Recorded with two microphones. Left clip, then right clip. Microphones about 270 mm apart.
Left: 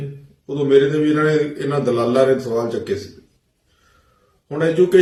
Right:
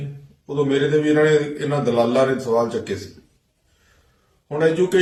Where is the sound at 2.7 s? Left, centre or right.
Centre.